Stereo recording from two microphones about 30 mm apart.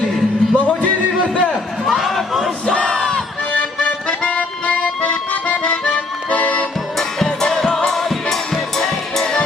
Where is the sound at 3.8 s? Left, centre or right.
Left.